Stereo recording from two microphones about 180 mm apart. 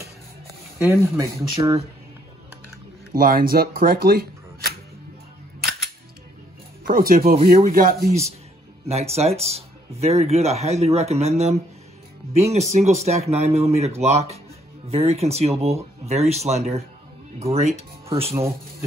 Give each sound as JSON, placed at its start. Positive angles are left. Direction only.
{"t": 0.7, "sound": "speech", "side_deg": -15}
{"t": 3.1, "sound": "speech", "side_deg": -50}
{"t": 5.6, "sound": "music", "side_deg": 0}
{"t": 6.9, "sound": "speech", "side_deg": -55}
{"t": 8.8, "sound": "speech", "side_deg": -35}
{"t": 12.5, "sound": "speech", "side_deg": -40}
{"t": 18.3, "sound": "speech", "side_deg": -15}